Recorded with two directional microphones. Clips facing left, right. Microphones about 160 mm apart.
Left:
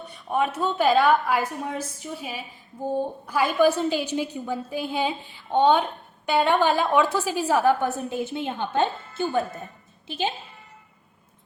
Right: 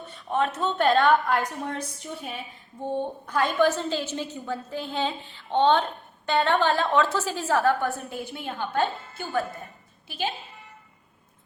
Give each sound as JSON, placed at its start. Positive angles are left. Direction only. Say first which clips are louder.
{"t": 0.1, "sound": "a woman's voice", "louder": "left 1 dB", "side_deg": 10}